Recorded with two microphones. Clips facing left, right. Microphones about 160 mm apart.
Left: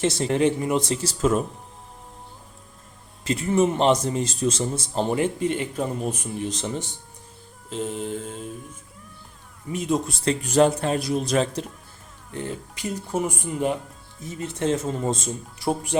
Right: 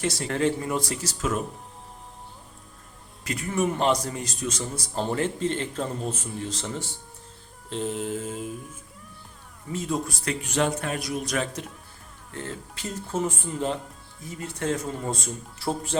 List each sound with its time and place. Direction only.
0.0 s a man's voice: 20° left (ahead or behind)
3.2 s a man's voice: 25° left (ahead or behind)
7.7 s mantra: centre (ahead or behind)
9.7 s a man's voice: 20° left (ahead or behind)
10.4 s a man's voice: 35° left (ahead or behind)
12.3 s a man's voice: 15° left (ahead or behind)